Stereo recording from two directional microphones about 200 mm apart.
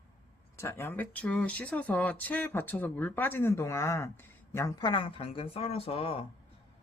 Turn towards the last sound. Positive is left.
turn(degrees=30)  # may be behind; listen again after turning